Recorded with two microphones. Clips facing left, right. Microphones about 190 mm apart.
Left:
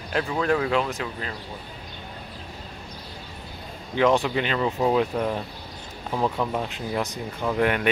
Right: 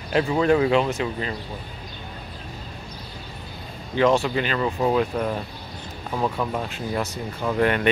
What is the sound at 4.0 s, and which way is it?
Speech, 15° left (ahead or behind).